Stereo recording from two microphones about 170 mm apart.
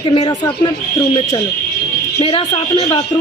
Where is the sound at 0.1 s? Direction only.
30° left (ahead or behind).